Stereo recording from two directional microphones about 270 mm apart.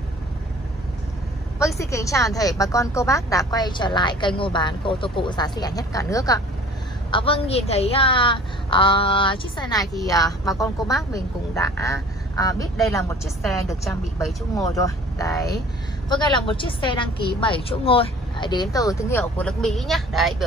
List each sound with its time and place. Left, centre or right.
1.8 s a woman's voice: centre
14.5 s speech: centre